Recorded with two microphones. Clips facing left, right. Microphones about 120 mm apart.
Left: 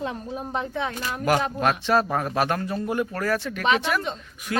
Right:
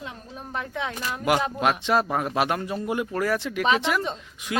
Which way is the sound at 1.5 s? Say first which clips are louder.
Left 1 dB; 15° right (ahead or behind).